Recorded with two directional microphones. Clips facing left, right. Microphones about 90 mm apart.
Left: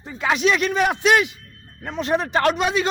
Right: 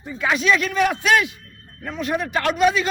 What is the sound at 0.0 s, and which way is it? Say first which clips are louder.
A man's voice: left 1 dB; 25° left (ahead or behind).